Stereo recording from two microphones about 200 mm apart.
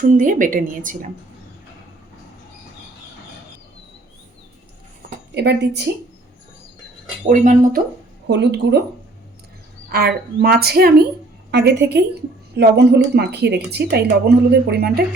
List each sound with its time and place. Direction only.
0.0 s a woman's voice: 40° right (ahead or behind)
5.3 s speech: 55° right (ahead or behind)
7.3 s a woman's voice: 40° right (ahead or behind)
8.3 s speech: 60° right (ahead or behind)
9.9 s a woman's voice: 50° right (ahead or behind)